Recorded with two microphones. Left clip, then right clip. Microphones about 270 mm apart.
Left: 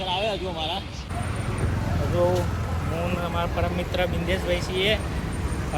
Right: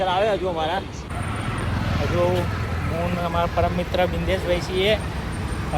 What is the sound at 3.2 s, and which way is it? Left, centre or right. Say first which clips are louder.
Speech: right 5 dB; centre.